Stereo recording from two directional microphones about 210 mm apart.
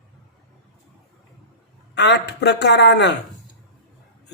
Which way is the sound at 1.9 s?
55° left (ahead or behind).